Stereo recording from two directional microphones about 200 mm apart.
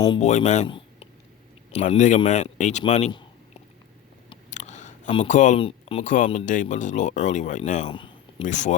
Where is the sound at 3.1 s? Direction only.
25° left (ahead or behind).